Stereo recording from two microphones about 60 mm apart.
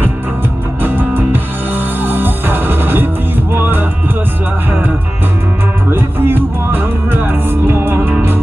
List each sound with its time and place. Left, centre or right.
0.8 s music: right
5.9 s music: right